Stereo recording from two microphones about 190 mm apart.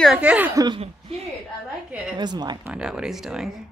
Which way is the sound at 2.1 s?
20° right (ahead or behind).